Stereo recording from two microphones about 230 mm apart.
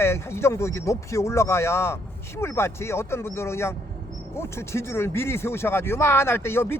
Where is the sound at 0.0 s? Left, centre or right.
Centre.